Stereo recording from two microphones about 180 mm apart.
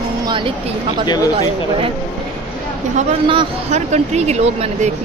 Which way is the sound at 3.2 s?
35° right (ahead or behind).